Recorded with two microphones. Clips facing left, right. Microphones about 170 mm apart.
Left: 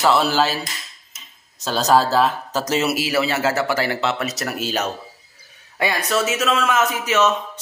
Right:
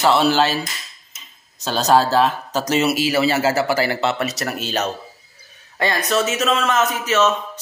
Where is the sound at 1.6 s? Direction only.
Centre (ahead or behind).